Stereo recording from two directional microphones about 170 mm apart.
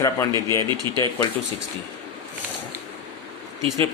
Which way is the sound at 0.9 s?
25° right (ahead or behind).